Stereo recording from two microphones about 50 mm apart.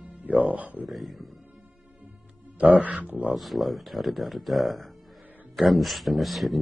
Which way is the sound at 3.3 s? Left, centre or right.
Centre.